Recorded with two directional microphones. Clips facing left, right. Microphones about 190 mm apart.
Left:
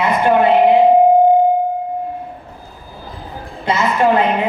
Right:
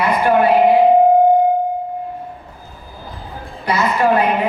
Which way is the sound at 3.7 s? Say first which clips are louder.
Left 1 dB; 25° left (ahead or behind).